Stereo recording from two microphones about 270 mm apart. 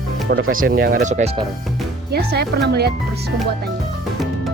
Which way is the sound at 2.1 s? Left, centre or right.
Right.